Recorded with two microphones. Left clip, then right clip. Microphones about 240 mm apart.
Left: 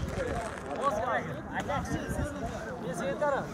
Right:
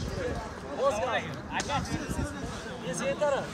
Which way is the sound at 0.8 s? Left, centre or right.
Right.